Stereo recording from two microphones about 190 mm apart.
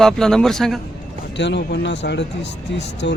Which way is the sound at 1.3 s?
65° left (ahead or behind).